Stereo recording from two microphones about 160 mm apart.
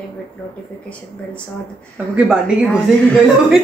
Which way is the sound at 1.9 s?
5° right (ahead or behind).